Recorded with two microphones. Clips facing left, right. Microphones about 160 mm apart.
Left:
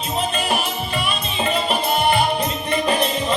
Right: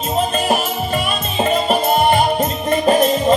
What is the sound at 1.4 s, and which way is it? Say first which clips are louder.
Music: right 6 dB; 45° right (ahead or behind).